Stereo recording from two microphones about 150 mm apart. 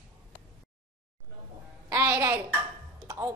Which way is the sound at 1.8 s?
20° right (ahead or behind).